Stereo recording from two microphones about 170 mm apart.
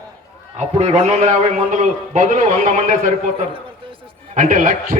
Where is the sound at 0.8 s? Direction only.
40° right (ahead or behind).